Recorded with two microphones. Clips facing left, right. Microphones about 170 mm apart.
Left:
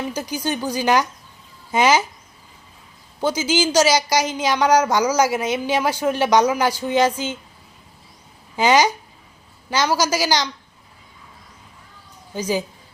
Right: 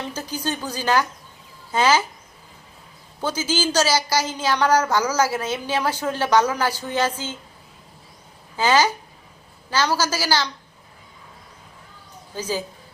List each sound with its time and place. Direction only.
0.1 s speech: 10° left (ahead or behind)
3.2 s speech: 15° left (ahead or behind)
8.5 s speech: 15° left (ahead or behind)
12.3 s speech: 15° left (ahead or behind)